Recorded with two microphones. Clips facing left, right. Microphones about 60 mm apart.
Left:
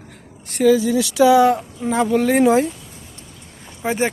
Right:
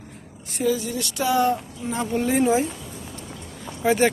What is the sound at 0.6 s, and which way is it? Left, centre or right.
Speech, left.